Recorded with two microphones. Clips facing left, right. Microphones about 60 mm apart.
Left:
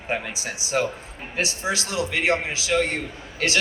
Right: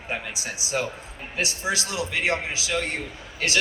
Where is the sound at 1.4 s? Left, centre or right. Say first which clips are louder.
Left 1 dB; left.